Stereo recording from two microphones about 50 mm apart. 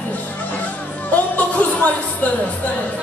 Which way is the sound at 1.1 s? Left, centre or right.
Left.